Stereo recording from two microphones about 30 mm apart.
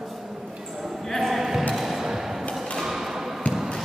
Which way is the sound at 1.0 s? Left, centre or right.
Centre.